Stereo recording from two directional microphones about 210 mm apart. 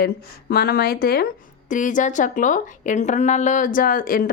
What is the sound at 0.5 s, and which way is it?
Speech, 50° left (ahead or behind).